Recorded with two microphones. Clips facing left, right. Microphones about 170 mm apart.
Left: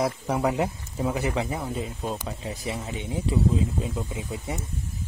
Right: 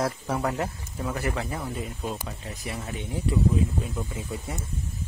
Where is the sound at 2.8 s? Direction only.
20° left (ahead or behind).